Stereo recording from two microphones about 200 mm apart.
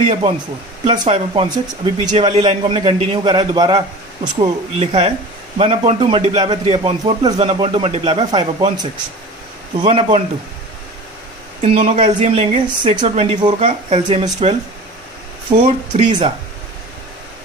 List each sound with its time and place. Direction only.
0.1 s speech: 30° right (ahead or behind)
9.7 s speech: 30° right (ahead or behind)
11.6 s speech: 30° right (ahead or behind)
15.5 s speech: 45° right (ahead or behind)